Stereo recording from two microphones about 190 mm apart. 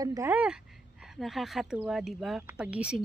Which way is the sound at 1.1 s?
Centre (ahead or behind).